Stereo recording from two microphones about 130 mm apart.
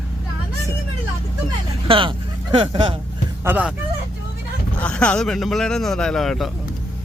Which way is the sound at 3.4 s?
15° right (ahead or behind).